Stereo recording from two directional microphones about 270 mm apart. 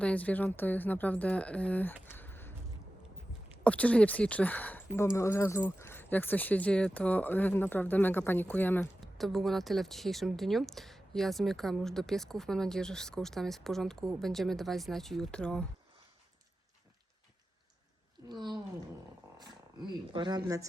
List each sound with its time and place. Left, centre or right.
0.0 s speech: centre
3.6 s speech: centre
18.3 s speech: centre
20.1 s speech: centre